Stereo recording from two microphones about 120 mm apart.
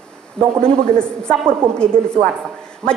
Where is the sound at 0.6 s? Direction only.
5° left (ahead or behind).